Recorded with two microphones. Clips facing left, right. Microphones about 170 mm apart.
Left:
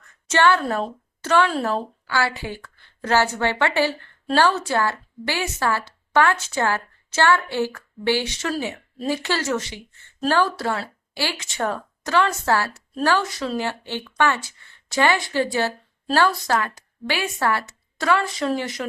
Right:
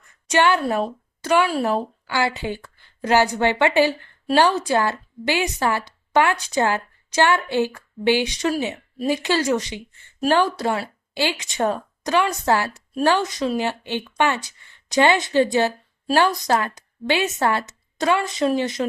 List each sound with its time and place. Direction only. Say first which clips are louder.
0.3 s speech: even; 15° right (ahead or behind)